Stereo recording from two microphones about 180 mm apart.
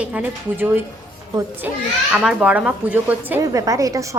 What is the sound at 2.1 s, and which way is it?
A woman's voice, 5° right (ahead or behind).